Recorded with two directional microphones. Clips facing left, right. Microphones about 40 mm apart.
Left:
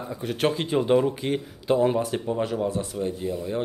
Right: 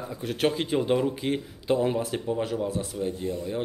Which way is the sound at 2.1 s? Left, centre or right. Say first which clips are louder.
Left 2 dB; centre.